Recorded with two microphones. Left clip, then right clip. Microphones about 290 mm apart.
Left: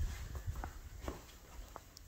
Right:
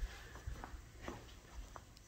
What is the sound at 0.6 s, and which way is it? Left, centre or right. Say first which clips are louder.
Walk: left 4 dB; left.